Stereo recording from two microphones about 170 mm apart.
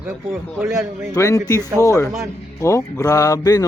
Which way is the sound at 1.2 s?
20° left (ahead or behind).